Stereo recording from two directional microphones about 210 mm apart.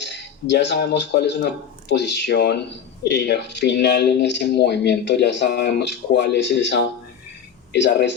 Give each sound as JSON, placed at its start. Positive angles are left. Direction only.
{"t": 0.0, "sound": "speech", "side_deg": 55}